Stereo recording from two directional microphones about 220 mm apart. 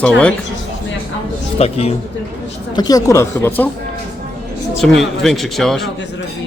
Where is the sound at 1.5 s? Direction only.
25° left (ahead or behind).